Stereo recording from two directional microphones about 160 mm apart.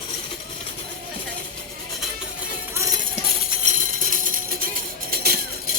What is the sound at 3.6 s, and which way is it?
Music, 55° right (ahead or behind).